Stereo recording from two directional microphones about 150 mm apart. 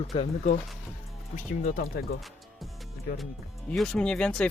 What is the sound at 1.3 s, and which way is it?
Speech, 60° left (ahead or behind).